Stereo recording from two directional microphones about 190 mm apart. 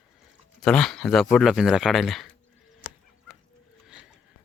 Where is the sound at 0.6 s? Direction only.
5° left (ahead or behind).